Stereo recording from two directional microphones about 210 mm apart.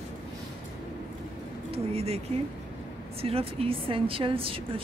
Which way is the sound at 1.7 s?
30° right (ahead or behind).